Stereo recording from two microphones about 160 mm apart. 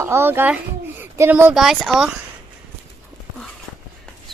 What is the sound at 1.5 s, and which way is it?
Speech, centre (ahead or behind).